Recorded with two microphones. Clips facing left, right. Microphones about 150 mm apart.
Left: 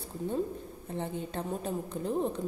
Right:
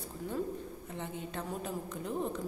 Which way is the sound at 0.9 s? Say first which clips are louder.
Left 6 dB; 35° left (ahead or behind).